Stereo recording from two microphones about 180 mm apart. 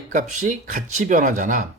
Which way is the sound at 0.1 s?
45° right (ahead or behind).